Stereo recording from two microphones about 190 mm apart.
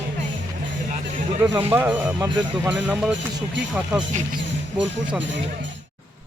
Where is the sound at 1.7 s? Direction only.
10° right (ahead or behind).